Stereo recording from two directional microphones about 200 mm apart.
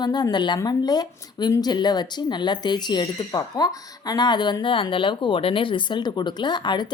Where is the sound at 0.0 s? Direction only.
20° left (ahead or behind).